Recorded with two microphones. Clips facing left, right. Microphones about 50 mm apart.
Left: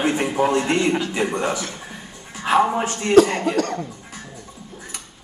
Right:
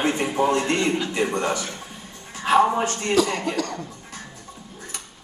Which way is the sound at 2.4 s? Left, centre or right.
Centre.